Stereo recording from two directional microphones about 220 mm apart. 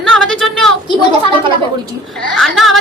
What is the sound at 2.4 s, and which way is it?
Speech, centre (ahead or behind).